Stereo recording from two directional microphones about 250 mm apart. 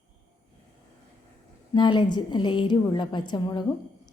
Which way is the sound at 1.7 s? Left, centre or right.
Centre.